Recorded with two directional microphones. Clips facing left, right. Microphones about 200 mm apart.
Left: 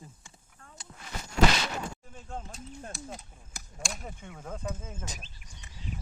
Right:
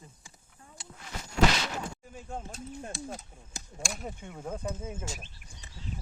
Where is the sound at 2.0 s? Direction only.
10° right (ahead or behind).